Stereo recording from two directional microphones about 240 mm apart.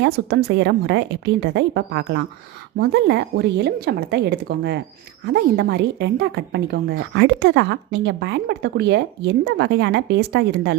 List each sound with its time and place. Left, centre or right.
0.0 s a woman's voice: right